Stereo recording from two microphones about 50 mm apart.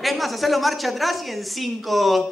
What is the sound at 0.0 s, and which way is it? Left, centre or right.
A woman's voice, centre.